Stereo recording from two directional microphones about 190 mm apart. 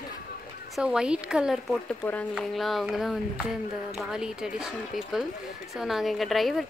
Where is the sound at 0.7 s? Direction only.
5° right (ahead or behind).